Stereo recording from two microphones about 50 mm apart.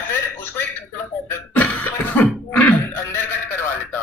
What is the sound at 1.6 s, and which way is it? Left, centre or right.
Cough, left.